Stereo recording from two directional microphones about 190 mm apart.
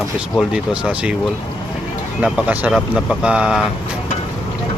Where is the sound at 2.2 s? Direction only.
5° right (ahead or behind).